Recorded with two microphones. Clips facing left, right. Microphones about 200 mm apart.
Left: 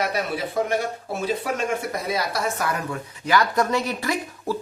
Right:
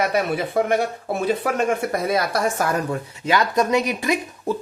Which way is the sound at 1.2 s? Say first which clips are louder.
Right 4 dB; 55° right (ahead or behind).